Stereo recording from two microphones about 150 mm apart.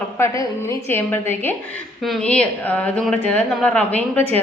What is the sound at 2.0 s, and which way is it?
A woman's voice, 5° left (ahead or behind).